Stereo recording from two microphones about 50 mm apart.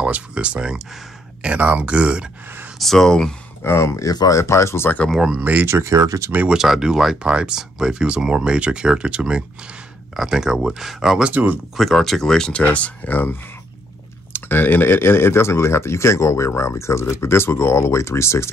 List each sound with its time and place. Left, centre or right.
0.0 s speech: right
2.8 s speech: centre
3.6 s speech: left
5.4 s speech: right
5.7 s speech: right
6.5 s speech: centre
11.2 s speech: right
11.7 s speech: centre
12.6 s speech: left